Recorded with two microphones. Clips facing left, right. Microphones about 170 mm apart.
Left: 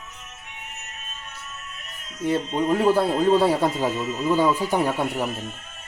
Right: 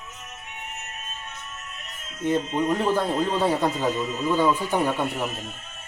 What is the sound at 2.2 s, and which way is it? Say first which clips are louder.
Speech: even; 15° left (ahead or behind).